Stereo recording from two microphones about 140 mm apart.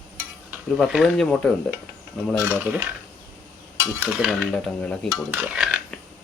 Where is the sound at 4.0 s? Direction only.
5° right (ahead or behind).